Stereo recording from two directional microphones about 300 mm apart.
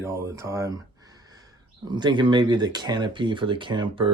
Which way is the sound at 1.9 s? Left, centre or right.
Centre.